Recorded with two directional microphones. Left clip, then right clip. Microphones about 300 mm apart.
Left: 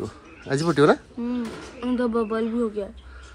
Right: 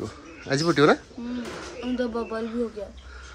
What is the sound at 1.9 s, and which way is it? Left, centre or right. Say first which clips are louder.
Speech: left 4 dB; left.